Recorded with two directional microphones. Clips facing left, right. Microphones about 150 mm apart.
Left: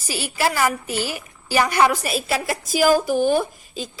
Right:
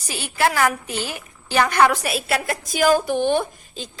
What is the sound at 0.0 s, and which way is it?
A woman's voice, 5° left (ahead or behind).